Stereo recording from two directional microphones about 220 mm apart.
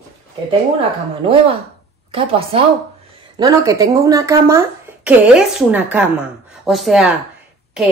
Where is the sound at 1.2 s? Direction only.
25° right (ahead or behind).